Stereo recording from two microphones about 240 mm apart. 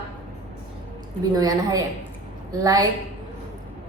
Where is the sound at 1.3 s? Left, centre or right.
Centre.